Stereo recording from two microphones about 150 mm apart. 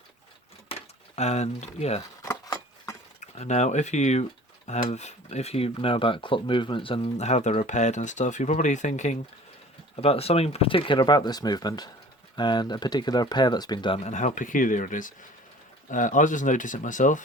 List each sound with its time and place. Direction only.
0.7 s speech: 45° left (ahead or behind)
2.0 s a sound: 20° left (ahead or behind)
3.2 s speech: 50° left (ahead or behind)
9.9 s speech: 40° left (ahead or behind)
14.0 s speech: 50° left (ahead or behind)